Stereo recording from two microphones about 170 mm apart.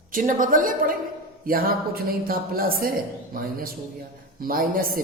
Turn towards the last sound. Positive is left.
turn(degrees=-60)  # may be behind; listen again after turning